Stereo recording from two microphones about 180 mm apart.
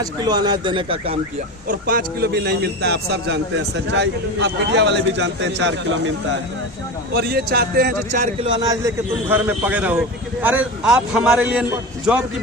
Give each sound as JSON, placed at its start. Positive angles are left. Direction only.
{"t": 0.0, "sound": "speech", "side_deg": -20}
{"t": 1.6, "sound": "a man's voice", "side_deg": -50}
{"t": 7.1, "sound": "a man's voice", "side_deg": -65}
{"t": 8.2, "sound": "speech", "side_deg": -30}
{"t": 8.6, "sound": "a man's voice", "side_deg": -20}